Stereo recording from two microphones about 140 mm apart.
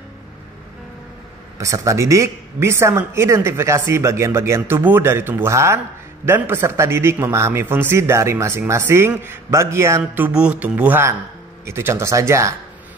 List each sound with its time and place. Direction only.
1.6 s a man's voice: 20° right (ahead or behind)